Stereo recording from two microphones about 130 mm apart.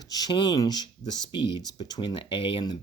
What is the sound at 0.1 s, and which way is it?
Speech, 30° left (ahead or behind).